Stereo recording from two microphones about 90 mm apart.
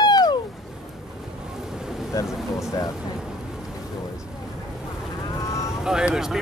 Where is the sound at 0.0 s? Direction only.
50° left (ahead or behind).